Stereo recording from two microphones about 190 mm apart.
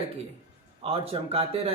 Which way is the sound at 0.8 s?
30° right (ahead or behind).